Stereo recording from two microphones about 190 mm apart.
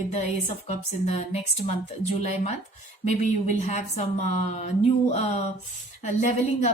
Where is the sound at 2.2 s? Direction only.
35° left (ahead or behind).